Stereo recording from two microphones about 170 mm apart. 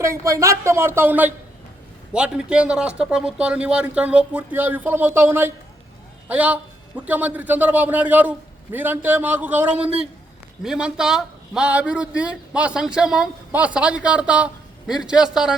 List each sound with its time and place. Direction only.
0.0 s a man's voice: 15° right (ahead or behind)